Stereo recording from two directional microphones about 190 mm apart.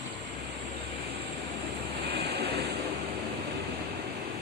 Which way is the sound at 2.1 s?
55° right (ahead or behind).